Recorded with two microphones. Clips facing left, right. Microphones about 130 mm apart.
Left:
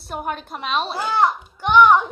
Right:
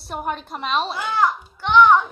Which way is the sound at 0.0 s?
Centre (ahead or behind).